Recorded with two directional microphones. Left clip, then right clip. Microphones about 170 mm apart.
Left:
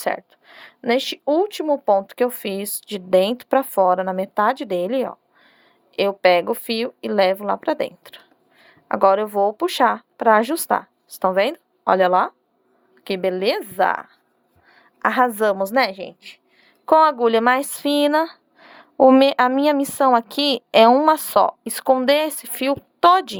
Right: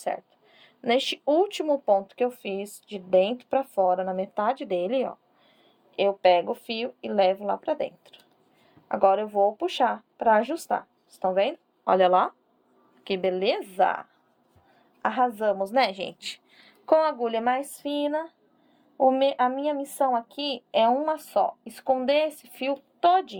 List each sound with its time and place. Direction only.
0.0 s speech: 45° left (ahead or behind)
6.0 s speech: 45° left (ahead or behind)
11.9 s speech: 30° left (ahead or behind); by 15.8 s 45° left (ahead or behind)
16.2 s a sound: centre (ahead or behind)
16.8 s speech: 35° left (ahead or behind); by 23.4 s 55° left (ahead or behind)